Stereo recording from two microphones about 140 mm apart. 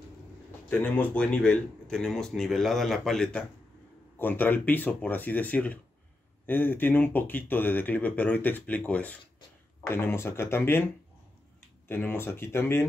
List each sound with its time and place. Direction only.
0.7 s speech: 10° left (ahead or behind)
4.2 s speech: 15° left (ahead or behind)
11.9 s speech: 15° left (ahead or behind)